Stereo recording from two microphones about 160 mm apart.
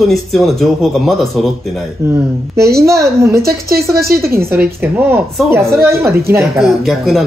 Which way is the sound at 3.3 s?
70° right (ahead or behind).